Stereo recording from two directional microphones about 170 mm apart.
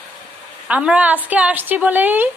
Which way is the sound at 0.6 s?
5° right (ahead or behind).